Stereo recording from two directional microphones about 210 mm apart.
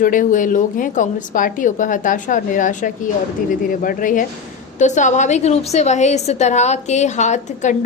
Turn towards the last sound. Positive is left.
turn(degrees=35)  # may be behind; listen again after turning